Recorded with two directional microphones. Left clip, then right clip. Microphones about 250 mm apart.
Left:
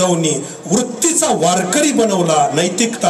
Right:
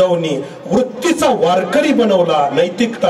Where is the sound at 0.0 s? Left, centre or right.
Left.